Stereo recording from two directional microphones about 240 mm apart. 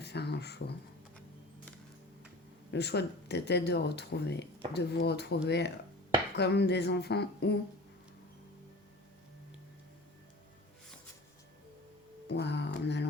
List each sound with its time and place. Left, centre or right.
0.0 s speech: left
2.7 s speech: left
12.3 s music: left